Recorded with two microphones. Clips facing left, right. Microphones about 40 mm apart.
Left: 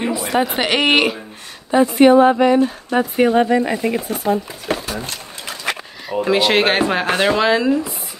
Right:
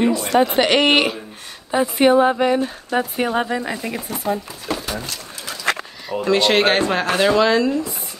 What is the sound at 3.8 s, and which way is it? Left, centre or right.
Speech, left.